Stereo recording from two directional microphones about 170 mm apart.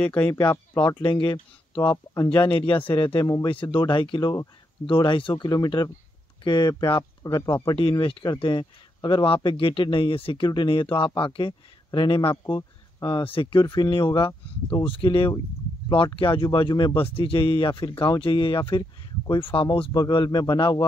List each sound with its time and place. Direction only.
0.0 s speech: 10° left (ahead or behind)
0.3 s speech: 20° left (ahead or behind)
3.1 s speech: 20° left (ahead or behind)
12.4 s speech: 20° left (ahead or behind)